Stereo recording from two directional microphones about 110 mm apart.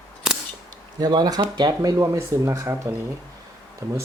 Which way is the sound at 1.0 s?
35° right (ahead or behind).